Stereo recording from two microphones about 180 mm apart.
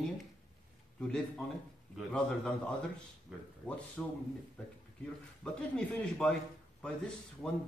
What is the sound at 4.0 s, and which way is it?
A man's voice, 5° left (ahead or behind).